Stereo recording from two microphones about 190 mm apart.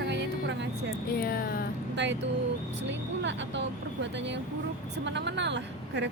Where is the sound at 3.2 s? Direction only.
70° right (ahead or behind).